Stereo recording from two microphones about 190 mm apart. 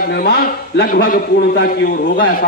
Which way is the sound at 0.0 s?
50° left (ahead or behind).